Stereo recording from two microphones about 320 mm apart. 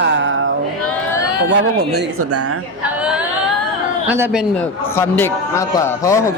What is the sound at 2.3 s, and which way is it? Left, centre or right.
Speech, right.